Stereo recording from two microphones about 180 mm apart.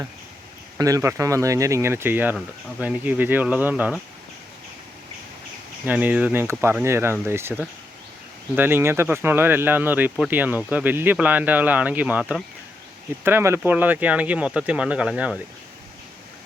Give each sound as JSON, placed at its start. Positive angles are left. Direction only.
{"t": 0.8, "sound": "speech", "side_deg": -20}
{"t": 5.8, "sound": "speech", "side_deg": -10}